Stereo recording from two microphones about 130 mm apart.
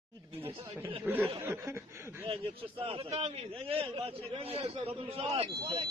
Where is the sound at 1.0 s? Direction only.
15° right (ahead or behind).